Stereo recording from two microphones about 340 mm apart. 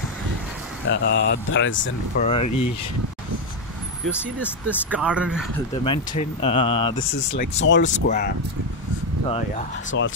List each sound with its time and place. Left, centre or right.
0.8 s speech: left
2.2 s speech: centre
4.0 s speech: centre
5.9 s speech: centre
7.2 s speech: left
9.8 s speech: left